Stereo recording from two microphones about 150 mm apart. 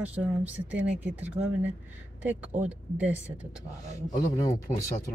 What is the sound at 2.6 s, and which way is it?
Speech, 10° right (ahead or behind).